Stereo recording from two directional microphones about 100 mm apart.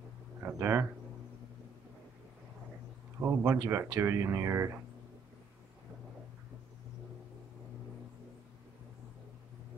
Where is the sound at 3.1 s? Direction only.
25° right (ahead or behind).